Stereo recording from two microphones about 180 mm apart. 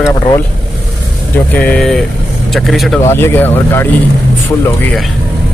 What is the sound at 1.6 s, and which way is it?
Speech, 5° left (ahead or behind).